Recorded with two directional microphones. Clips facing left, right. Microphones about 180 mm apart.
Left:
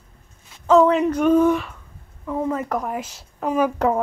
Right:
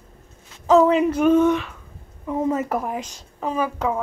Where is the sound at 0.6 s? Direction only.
5° right (ahead or behind).